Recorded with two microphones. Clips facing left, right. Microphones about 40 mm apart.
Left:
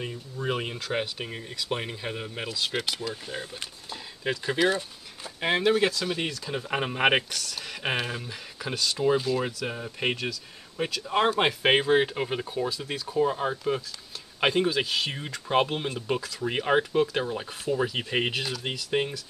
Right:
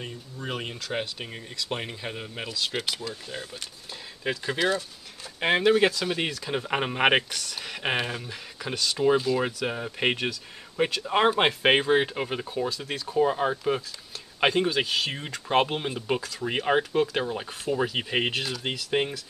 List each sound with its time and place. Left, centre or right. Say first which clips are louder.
0.0 s speech: left 4 dB; centre
8.9 s speech: right 2 dB; centre; by 11.1 s right
11.1 s speech: right 1 dB; centre
14.4 s speech: right 1 dB; centre